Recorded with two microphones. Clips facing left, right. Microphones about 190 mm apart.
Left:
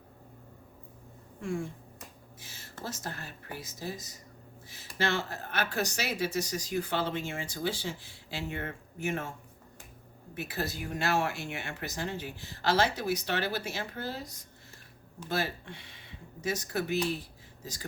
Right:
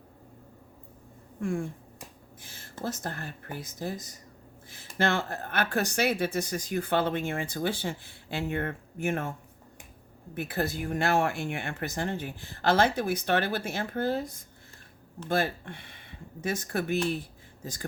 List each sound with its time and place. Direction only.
1.4 s speech: 55° right (ahead or behind)
10.3 s speech: 55° right (ahead or behind)